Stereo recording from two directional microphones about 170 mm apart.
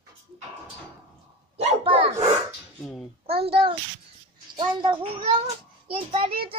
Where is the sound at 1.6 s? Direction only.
35° right (ahead or behind).